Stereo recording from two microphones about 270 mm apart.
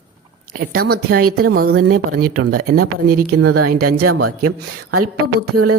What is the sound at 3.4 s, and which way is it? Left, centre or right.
Speech, right.